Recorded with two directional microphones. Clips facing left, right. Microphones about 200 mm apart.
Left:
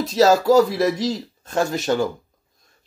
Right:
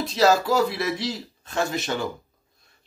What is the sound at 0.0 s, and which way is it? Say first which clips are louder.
Speech: left 4 dB; 45° left (ahead or behind).